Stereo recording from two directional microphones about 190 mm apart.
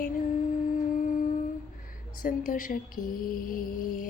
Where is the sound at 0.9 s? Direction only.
45° left (ahead or behind).